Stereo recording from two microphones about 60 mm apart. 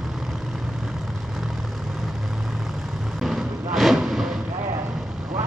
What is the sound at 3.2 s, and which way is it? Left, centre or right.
Vehicle, centre.